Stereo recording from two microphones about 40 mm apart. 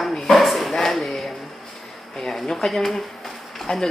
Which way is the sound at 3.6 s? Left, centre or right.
Centre.